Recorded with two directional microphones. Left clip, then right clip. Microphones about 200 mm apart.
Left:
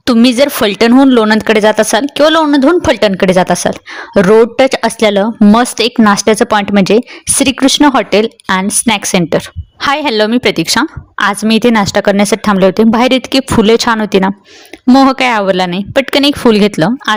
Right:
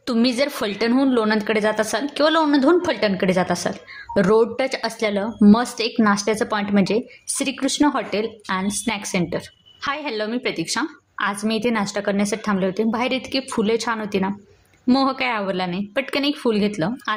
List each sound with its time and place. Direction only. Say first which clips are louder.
0.0 s speech: left 12 dB; 45° left (ahead or behind)